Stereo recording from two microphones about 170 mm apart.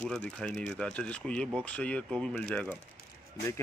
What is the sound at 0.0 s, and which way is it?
Speech, 5° left (ahead or behind).